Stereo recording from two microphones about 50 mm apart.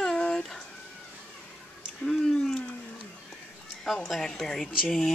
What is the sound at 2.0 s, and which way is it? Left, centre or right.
Speech, centre.